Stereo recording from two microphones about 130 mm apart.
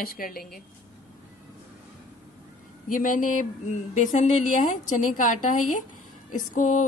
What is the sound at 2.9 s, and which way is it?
Speech, 90° left.